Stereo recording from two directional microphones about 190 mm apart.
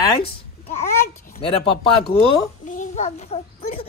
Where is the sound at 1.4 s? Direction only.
30° left (ahead or behind).